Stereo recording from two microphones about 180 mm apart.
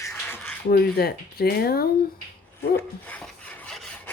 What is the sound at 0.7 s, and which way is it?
Speech, 60° left (ahead or behind).